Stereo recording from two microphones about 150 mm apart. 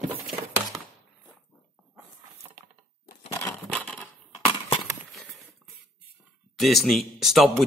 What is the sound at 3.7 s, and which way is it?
Typewriter, 10° left (ahead or behind).